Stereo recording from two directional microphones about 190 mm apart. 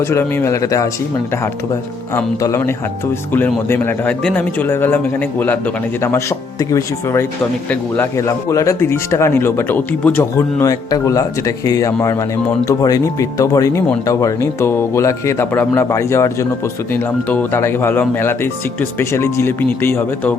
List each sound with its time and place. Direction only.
0.0 s speech: 15° left (ahead or behind)
2.1 s speech: 15° left (ahead or behind)